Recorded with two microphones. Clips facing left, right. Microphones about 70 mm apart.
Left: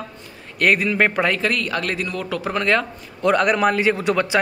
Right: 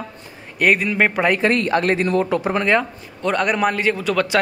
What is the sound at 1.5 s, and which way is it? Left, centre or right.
Speech, right.